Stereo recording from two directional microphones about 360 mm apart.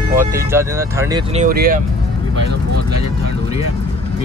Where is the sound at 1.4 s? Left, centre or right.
Right.